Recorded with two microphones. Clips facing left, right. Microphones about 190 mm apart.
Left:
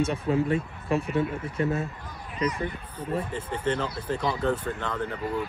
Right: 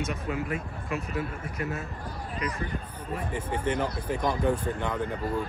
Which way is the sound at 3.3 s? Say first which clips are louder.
Right 4 dB; 10° right (ahead or behind).